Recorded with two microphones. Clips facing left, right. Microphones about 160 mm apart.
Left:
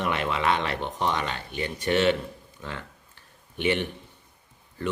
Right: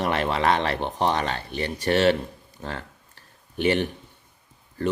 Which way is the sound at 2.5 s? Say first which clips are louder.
Right 5 dB; 35° right (ahead or behind).